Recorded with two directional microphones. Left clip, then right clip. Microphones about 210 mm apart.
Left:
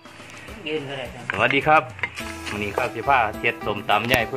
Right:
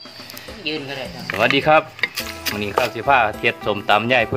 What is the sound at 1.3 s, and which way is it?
Speech, 25° right (ahead or behind).